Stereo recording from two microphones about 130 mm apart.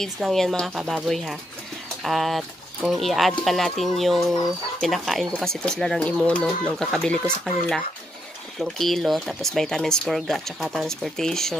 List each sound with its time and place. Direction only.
0.0 s speech: centre (ahead or behind)
8.5 s speech: centre (ahead or behind)